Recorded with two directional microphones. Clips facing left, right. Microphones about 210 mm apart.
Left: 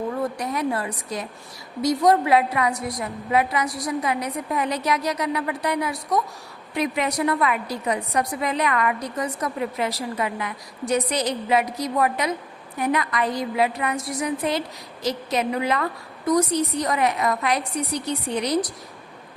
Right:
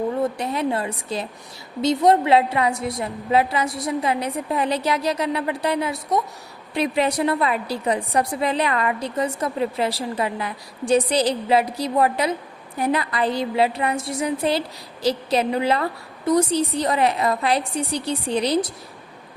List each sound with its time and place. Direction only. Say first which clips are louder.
0.2 s a woman's voice: right 2 dB; 25° right (ahead or behind)